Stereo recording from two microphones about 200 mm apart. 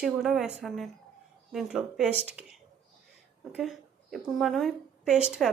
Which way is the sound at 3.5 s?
Centre (ahead or behind).